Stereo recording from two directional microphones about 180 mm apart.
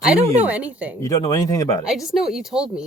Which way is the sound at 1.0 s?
20° left (ahead or behind).